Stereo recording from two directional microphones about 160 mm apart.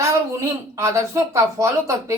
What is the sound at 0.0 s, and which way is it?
A woman's voice, 20° right (ahead or behind).